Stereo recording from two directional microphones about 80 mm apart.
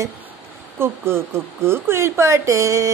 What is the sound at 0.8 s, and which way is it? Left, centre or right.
Speech, right.